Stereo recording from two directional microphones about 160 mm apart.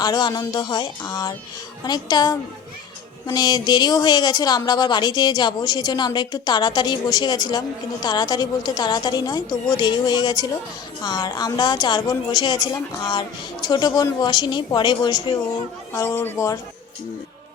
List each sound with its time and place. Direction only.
0.0 s a woman's voice: 25° left (ahead or behind)
15.9 s a man's voice: 15° left (ahead or behind)